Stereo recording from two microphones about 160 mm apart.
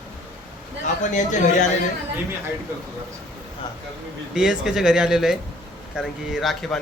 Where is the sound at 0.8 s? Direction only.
50° left (ahead or behind).